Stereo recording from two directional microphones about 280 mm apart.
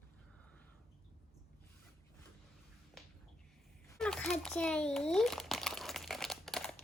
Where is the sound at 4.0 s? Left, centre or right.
Centre.